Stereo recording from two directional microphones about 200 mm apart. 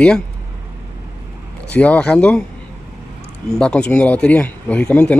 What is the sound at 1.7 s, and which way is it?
Speech, 5° left (ahead or behind).